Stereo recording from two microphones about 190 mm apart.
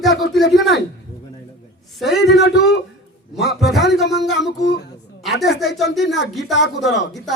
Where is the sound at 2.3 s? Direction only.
60° left (ahead or behind).